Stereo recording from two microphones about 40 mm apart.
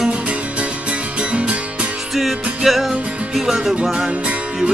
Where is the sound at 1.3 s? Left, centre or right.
Right.